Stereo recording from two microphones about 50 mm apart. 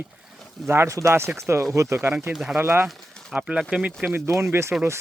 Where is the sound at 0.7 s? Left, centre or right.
Right.